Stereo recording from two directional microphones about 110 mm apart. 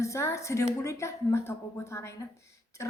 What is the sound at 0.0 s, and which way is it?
A woman's voice, 25° left (ahead or behind).